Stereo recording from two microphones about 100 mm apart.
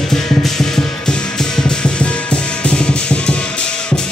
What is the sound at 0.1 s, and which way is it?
Music, 5° left (ahead or behind).